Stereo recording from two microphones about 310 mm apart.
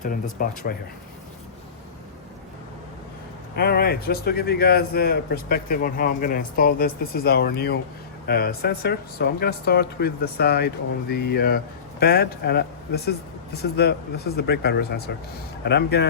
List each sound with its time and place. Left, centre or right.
0.0 s speech: left
3.5 s speech: left